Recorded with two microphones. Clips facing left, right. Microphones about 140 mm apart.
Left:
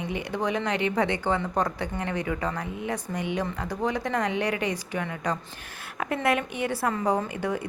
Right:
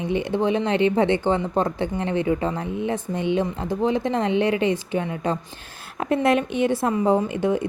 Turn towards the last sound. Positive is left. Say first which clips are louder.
# right 7 dB
turn(degrees=-25)  # may be behind; listen again after turning